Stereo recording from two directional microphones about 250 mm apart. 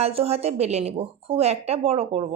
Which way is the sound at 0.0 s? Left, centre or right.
Right.